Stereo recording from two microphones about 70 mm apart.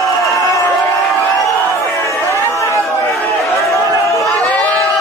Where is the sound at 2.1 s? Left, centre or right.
Left.